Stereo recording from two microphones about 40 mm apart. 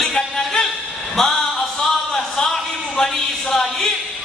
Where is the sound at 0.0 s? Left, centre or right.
Centre.